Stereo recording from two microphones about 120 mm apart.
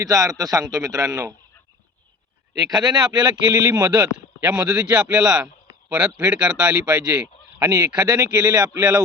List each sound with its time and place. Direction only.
0.0 s a man's voice: 30° right (ahead or behind)
2.6 s speech: 35° right (ahead or behind)
4.4 s speech: 10° right (ahead or behind)
7.6 s speech: 35° right (ahead or behind)